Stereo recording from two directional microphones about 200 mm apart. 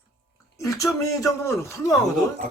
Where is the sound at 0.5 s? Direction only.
15° left (ahead or behind).